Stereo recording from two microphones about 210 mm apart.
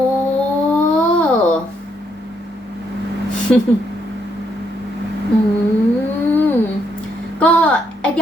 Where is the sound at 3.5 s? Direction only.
5° left (ahead or behind).